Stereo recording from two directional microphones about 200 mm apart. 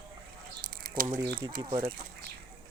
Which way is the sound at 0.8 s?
45° right (ahead or behind).